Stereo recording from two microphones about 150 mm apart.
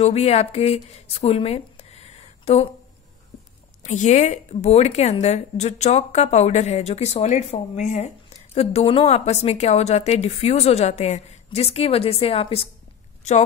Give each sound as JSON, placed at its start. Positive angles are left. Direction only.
{"t": 0.0, "sound": "a woman's voice", "side_deg": 45}
{"t": 3.8, "sound": "a woman's voice", "side_deg": 55}
{"t": 8.5, "sound": "a woman's voice", "side_deg": 40}